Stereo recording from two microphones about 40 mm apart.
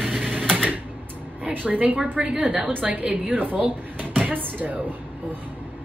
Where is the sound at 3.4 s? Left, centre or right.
Right.